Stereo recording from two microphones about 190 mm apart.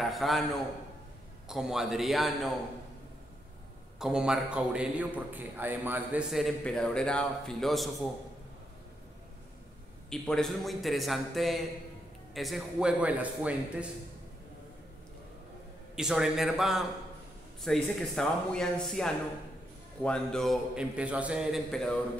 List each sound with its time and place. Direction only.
0.0 s a man's voice: centre (ahead or behind)
1.5 s a man's voice: centre (ahead or behind)
4.0 s a man's voice: 5° right (ahead or behind)
10.0 s a man's voice: 5° left (ahead or behind)
16.0 s a man's voice: 5° right (ahead or behind)